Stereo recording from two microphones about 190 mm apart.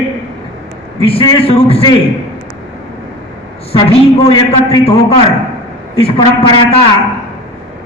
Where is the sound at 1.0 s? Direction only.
25° left (ahead or behind).